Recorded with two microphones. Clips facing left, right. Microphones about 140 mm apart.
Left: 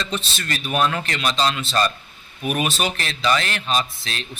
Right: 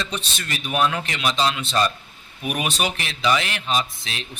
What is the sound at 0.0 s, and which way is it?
Speech, 15° right (ahead or behind).